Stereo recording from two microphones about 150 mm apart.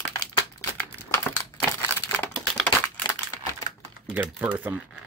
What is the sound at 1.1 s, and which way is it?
Crumpling, 15° left (ahead or behind).